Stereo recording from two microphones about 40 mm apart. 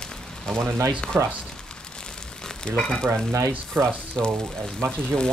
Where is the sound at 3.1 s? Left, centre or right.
Right.